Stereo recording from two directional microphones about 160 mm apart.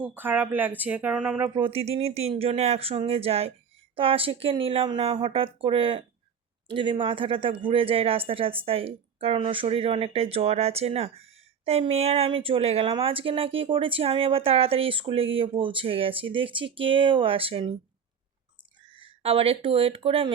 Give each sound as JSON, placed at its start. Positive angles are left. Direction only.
{"t": 0.0, "sound": "speech", "side_deg": -10}
{"t": 1.5, "sound": "speech", "side_deg": -35}
{"t": 18.9, "sound": "speech", "side_deg": -35}